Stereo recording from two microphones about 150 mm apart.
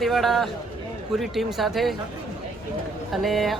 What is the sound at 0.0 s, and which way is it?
Speech, centre (ahead or behind).